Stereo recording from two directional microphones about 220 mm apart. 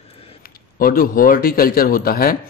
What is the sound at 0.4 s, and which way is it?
A man's voice, 40° left (ahead or behind).